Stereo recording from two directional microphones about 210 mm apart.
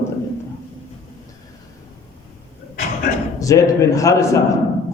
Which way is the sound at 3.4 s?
15° left (ahead or behind).